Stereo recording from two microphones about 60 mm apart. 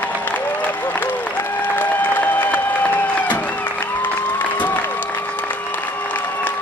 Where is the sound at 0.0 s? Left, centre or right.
Left.